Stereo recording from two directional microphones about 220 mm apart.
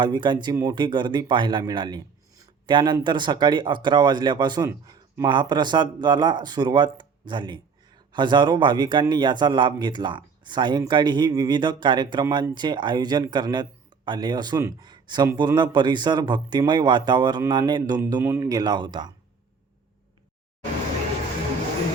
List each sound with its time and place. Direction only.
0.0 s a man's voice: 20° right (ahead or behind)